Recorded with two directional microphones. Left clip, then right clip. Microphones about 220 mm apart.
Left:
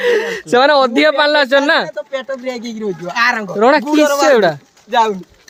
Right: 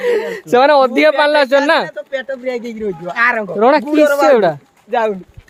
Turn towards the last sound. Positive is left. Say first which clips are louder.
# left 2 dB
turn(degrees=50)  # may be behind; listen again after turning